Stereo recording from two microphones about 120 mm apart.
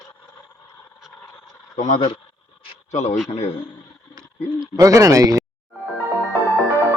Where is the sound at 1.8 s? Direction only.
85° left.